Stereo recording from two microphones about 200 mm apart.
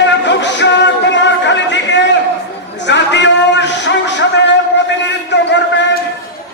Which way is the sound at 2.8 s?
60° left (ahead or behind).